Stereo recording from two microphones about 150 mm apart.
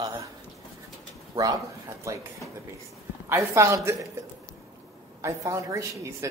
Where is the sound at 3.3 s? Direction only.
20° right (ahead or behind).